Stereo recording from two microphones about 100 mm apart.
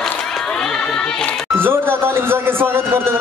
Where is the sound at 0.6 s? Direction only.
5° left (ahead or behind).